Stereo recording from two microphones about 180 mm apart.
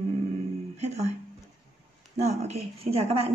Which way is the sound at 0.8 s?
40° right (ahead or behind).